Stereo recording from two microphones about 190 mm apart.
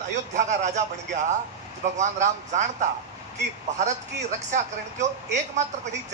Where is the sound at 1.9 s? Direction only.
40° right (ahead or behind).